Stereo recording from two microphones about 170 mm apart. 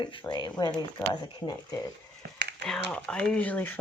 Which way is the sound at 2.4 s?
80° right.